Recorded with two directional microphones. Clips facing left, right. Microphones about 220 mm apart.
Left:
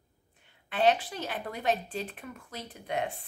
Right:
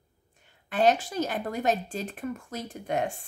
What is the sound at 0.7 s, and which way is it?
Speech, 45° right (ahead or behind).